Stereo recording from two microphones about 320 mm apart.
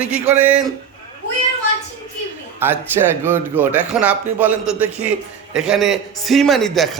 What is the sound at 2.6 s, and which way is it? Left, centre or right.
Speech, centre.